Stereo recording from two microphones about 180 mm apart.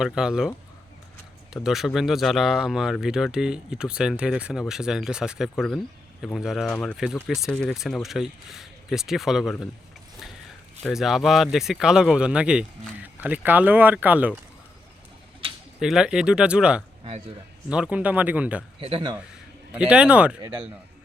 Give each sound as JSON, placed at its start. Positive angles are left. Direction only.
{"t": 0.0, "sound": "speech", "side_deg": -5}
{"t": 1.6, "sound": "speech", "side_deg": 0}
{"t": 10.8, "sound": "speech", "side_deg": 0}
{"t": 15.8, "sound": "speech", "side_deg": -5}
{"t": 18.8, "sound": "speech", "side_deg": -30}
{"t": 19.7, "sound": "speech", "side_deg": -5}